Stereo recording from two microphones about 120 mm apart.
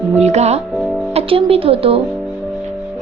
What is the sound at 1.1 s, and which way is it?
Speech, 55° right (ahead or behind).